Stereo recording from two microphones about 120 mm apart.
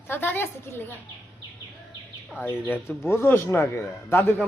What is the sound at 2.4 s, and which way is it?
Speech, 20° left (ahead or behind).